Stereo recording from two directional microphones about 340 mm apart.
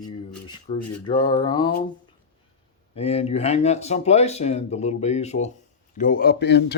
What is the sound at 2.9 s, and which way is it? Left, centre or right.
Speech, centre.